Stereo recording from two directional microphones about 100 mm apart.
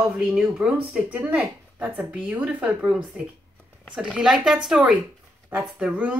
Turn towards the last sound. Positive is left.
turn(degrees=-15)  # may be behind; listen again after turning